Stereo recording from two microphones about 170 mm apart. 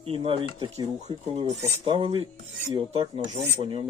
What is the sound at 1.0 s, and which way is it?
Filing, 35° right (ahead or behind).